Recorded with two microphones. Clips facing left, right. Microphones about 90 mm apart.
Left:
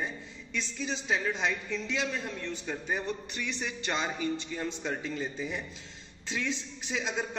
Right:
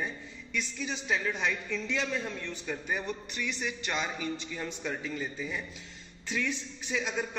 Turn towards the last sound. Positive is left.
turn(degrees=20)  # may be behind; listen again after turning